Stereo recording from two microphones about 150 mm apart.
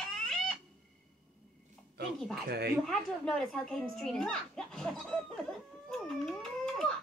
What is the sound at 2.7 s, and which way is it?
A woman's voice, centre (ahead or behind).